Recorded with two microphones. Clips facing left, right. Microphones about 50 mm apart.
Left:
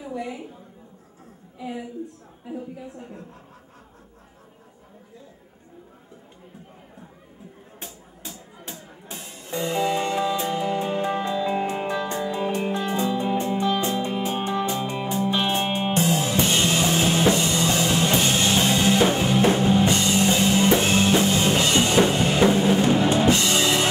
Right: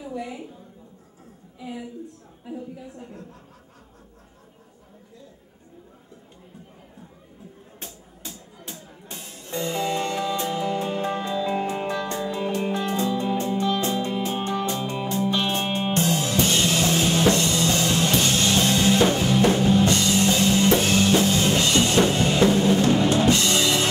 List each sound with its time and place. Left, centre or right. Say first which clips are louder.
0.0 s a woman's voice: left 1 dB; centre
3.0 s speech: left 1 dB; centre
7.8 s a sound: left 1 dB; centre
8.6 s music: left 1 dB; centre